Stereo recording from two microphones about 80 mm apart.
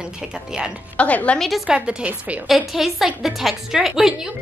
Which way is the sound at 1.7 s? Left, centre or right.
Centre.